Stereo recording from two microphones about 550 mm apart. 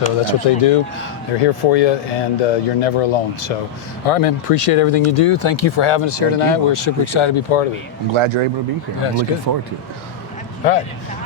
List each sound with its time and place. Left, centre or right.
0.3 s speech: left
8.1 s speech: right
9.5 s speech: right
10.6 s speech: left